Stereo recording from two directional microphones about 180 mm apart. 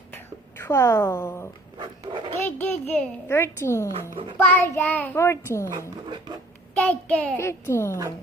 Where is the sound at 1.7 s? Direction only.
25° right (ahead or behind).